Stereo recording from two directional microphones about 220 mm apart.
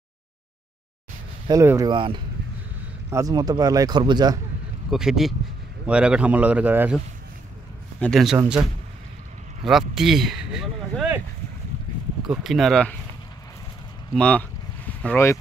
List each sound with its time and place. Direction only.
1.5 s speech: 15° right (ahead or behind)
4.9 s speech: centre (ahead or behind)
8.0 s speech: centre (ahead or behind)
9.7 s speech: centre (ahead or behind)
12.2 s speech: centre (ahead or behind)
14.1 s speech: 5° left (ahead or behind)